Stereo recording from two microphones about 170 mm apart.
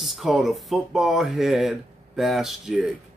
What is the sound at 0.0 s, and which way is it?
Speech, centre (ahead or behind).